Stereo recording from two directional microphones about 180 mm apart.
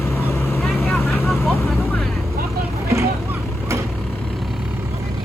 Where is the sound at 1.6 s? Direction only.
Centre (ahead or behind).